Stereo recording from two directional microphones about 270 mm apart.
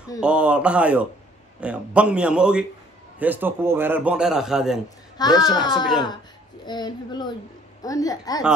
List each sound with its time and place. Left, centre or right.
0.2 s a man's voice: centre
4.8 s a woman's voice: centre